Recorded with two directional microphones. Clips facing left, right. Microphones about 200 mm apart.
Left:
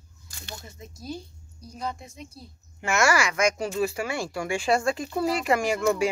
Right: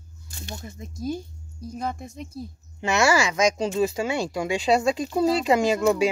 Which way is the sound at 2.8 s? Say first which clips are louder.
Right 2 dB; 20° right (ahead or behind).